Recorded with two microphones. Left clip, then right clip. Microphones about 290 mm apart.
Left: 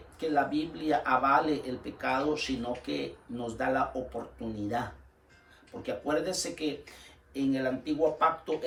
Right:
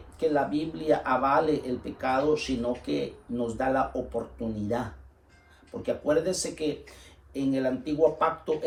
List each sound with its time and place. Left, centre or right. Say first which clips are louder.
0.2 s speech: right 3 dB; centre